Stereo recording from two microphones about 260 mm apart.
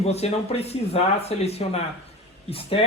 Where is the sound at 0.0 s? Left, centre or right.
Left.